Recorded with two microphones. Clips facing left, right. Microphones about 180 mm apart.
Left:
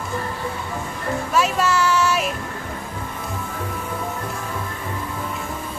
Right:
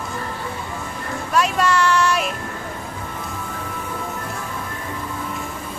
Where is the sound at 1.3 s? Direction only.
Centre (ahead or behind).